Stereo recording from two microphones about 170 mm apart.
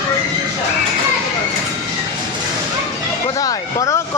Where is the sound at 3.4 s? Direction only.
20° left (ahead or behind).